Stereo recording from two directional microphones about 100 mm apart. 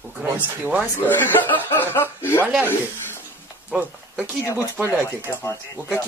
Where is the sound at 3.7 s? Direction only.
10° right (ahead or behind).